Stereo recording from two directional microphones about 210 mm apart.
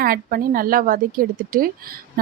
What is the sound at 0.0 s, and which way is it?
A woman's voice, 45° right (ahead or behind).